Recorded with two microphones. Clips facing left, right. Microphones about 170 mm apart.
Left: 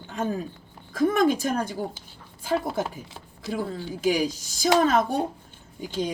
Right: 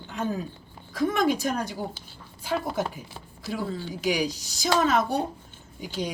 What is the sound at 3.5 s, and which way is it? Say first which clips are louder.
Speech: left 1 dB; 50° left (ahead or behind).